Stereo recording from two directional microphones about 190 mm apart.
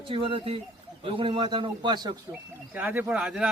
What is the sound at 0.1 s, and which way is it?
A man's voice, 30° right (ahead or behind).